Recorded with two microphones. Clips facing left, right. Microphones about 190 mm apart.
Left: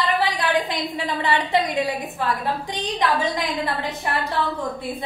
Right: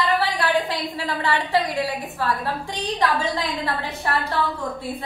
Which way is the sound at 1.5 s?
20° left (ahead or behind).